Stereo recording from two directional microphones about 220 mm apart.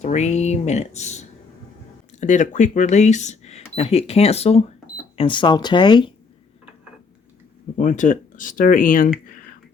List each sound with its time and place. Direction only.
0.0 s speech: 30° left (ahead or behind)
7.8 s speech: 35° left (ahead or behind)